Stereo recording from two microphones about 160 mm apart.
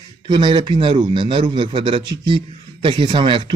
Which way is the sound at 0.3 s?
30° right (ahead or behind).